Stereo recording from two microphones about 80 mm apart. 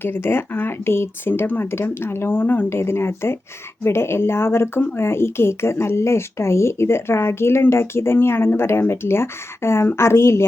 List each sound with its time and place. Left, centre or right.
0.0 s speech: left